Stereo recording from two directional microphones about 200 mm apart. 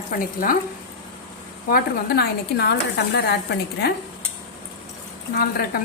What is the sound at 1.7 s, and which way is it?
A woman's voice, 50° left (ahead or behind).